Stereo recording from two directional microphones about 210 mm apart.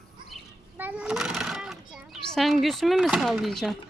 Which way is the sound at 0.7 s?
10° right (ahead or behind).